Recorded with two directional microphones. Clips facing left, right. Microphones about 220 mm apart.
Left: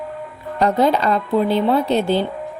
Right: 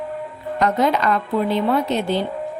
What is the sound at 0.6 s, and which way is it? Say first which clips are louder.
A woman's voice: left 2 dB; 30° left (ahead or behind).